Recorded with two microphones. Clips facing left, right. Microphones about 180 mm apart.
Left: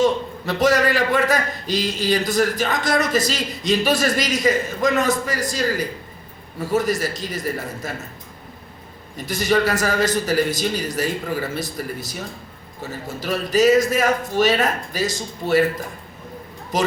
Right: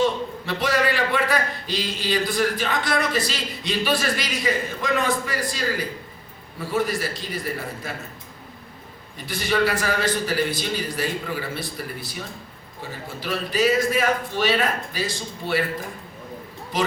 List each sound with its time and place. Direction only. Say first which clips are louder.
0.0 s a man's voice: left 3 dB; 45° left (ahead or behind)
9.1 s a man's voice: left 4 dB; 40° left (ahead or behind)
16.7 s a man's voice: left 3 dB; 45° left (ahead or behind)